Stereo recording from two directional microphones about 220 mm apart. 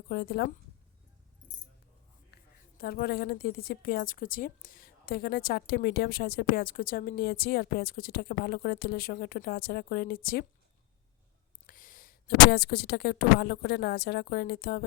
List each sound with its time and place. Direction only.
0.1 s a woman's voice: 45° left (ahead or behind)
2.3 s a woman's voice: 45° left (ahead or behind)
11.6 s a woman's voice: 40° left (ahead or behind)